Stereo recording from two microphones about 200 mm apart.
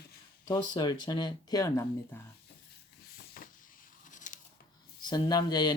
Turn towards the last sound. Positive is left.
turn(degrees=20)  # may be behind; listen again after turning